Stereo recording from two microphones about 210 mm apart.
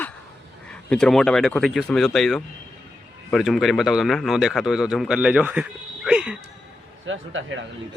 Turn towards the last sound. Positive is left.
turn(degrees=-65)  # may be behind; listen again after turning